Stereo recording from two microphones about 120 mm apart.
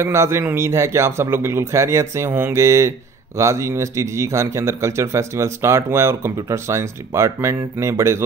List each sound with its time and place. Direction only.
0.0 s speech: 20° right (ahead or behind)